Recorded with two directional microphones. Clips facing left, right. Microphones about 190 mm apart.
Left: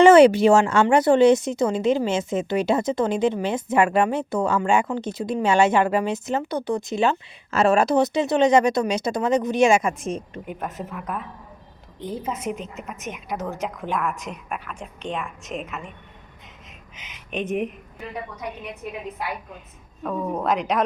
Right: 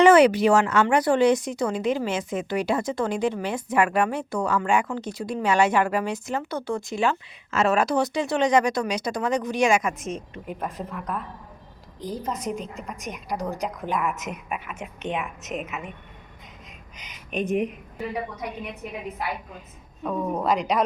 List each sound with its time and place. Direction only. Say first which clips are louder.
0.0 s speech: left 3 dB; 25° left (ahead or behind)
10.4 s a woman's voice: even; centre (ahead or behind)
17.3 s a woman's voice: right 1 dB; centre (ahead or behind)
19.5 s a woman's voice: even; centre (ahead or behind)